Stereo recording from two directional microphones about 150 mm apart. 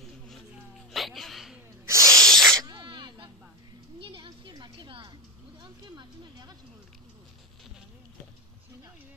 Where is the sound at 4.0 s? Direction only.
35° right (ahead or behind).